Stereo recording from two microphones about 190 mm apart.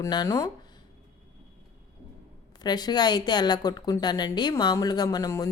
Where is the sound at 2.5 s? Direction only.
20° left (ahead or behind).